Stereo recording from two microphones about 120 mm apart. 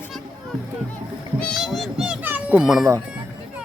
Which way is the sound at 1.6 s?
Centre (ahead or behind).